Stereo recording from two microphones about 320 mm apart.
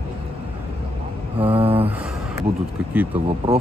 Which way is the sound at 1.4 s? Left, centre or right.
Centre.